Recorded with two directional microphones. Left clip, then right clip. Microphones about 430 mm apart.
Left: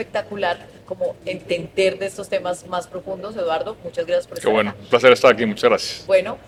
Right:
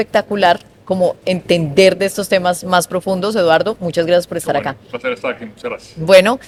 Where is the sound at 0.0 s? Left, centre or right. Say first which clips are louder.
Right 10 dB; right.